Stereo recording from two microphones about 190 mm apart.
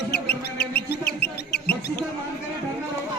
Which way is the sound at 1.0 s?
60° left (ahead or behind).